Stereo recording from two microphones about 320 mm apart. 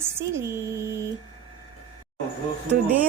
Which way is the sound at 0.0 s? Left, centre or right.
Centre.